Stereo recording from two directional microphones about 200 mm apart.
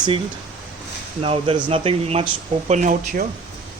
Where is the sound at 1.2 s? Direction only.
30° right (ahead or behind).